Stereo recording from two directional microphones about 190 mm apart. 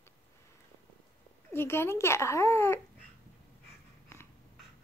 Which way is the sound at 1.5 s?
10° left (ahead or behind).